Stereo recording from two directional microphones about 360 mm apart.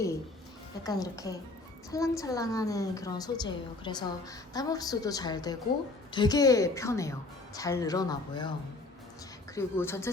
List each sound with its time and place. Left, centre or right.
0.9 s a woman's voice: centre
9.6 s a woman's voice: centre